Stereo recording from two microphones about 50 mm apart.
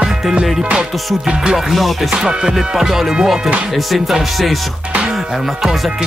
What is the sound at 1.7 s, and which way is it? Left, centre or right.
Music, centre.